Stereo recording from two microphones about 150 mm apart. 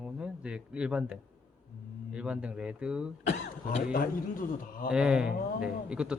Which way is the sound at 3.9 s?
70° left (ahead or behind).